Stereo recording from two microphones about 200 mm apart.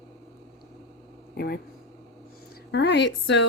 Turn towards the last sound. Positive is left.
turn(degrees=60)  # may be behind; listen again after turning